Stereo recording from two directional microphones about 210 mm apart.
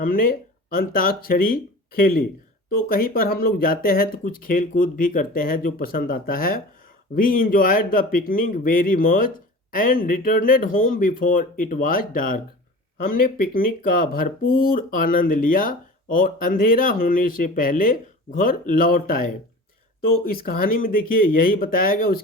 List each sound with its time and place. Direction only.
0.0 s speech: 45° left (ahead or behind)
13.4 s speech: 45° left (ahead or behind)